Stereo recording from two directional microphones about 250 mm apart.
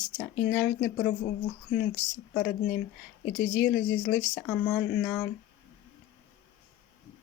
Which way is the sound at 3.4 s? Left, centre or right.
Left.